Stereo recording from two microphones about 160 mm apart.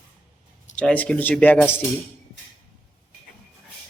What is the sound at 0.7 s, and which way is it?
Speech, 10° left (ahead or behind).